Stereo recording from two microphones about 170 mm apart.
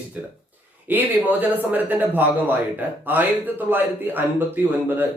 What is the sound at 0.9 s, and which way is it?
Speech, 10° right (ahead or behind).